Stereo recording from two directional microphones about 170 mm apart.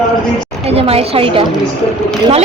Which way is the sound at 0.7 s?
35° right (ahead or behind).